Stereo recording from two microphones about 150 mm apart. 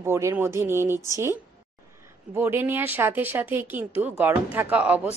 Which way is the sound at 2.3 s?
15° right (ahead or behind).